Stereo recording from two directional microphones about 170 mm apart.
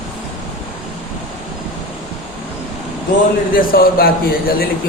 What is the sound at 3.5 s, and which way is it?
A man's voice, 60° left (ahead or behind).